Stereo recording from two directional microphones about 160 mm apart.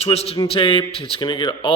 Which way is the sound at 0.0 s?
40° left (ahead or behind).